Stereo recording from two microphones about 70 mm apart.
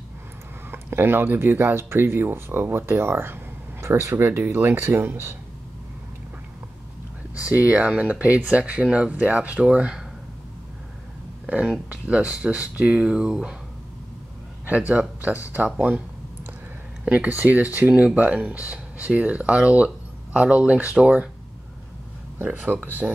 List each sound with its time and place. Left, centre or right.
0.7 s speech: right
7.3 s speech: centre
11.4 s speech: centre
14.7 s speech: centre
17.0 s speech: centre
17.3 s speech: right
22.4 s speech: right